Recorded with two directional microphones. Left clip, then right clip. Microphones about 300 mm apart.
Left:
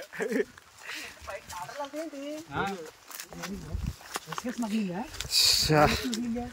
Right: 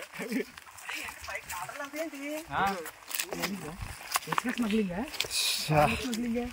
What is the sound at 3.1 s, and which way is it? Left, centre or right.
Wild animals, right.